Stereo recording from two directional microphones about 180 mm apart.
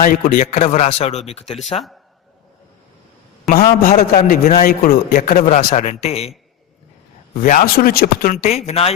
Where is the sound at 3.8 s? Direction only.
45° left (ahead or behind).